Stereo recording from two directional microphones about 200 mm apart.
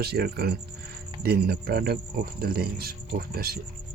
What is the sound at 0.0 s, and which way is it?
Speech, 50° right (ahead or behind).